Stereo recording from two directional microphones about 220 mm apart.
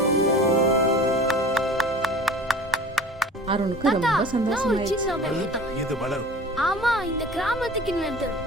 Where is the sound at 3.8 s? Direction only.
Centre (ahead or behind).